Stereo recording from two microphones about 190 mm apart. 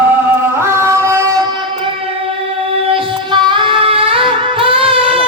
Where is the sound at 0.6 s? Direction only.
15° right (ahead or behind).